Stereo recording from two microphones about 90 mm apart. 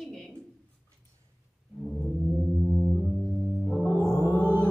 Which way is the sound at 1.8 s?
Centre (ahead or behind).